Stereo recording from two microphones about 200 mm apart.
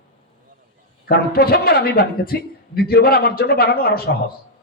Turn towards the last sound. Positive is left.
turn(degrees=50)  # may be behind; listen again after turning